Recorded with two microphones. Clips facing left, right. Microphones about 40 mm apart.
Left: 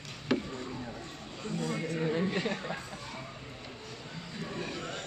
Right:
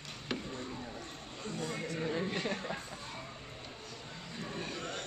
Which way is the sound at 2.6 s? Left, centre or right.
Centre.